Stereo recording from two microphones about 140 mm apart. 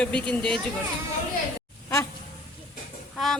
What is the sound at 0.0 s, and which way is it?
Speech, 10° left (ahead or behind).